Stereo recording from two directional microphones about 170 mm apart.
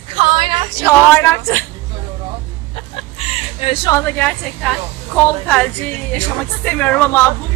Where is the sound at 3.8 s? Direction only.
15° left (ahead or behind).